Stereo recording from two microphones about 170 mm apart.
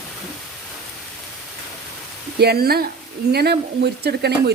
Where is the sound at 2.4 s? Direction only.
70° right (ahead or behind).